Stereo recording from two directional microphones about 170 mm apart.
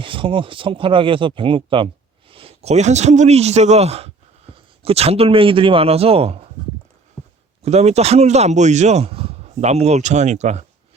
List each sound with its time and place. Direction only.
0.0 s a man's voice: 30° right (ahead or behind)
7.6 s speech: 40° right (ahead or behind)